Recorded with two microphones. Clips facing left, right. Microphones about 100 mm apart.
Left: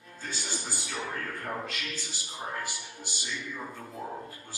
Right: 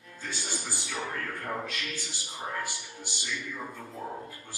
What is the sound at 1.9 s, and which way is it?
Speech, 20° right (ahead or behind).